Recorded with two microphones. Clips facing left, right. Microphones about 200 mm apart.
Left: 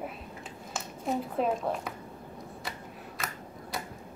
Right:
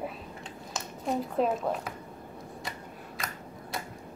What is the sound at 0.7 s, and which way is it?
A woman's voice, centre (ahead or behind).